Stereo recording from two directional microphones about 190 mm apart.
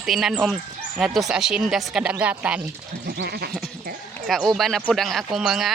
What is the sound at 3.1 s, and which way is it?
Goat, 55° right (ahead or behind).